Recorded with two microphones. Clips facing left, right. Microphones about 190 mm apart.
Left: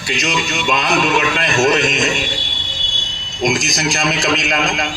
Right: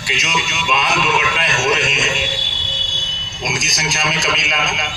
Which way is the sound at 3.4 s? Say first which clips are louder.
Left 7 dB; 50° left (ahead or behind).